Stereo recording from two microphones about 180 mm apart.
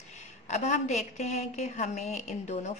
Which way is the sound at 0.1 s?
40° left (ahead or behind).